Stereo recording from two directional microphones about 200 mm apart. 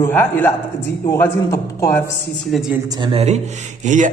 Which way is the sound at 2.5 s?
Centre (ahead or behind).